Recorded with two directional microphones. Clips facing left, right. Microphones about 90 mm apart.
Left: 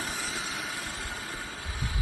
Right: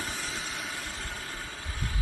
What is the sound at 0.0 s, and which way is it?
Vehicle, centre (ahead or behind).